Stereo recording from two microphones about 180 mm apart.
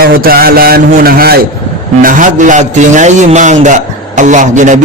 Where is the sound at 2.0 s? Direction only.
45° right (ahead or behind).